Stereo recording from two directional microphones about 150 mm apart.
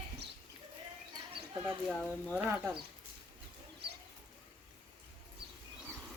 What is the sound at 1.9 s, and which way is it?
Speech, 5° left (ahead or behind).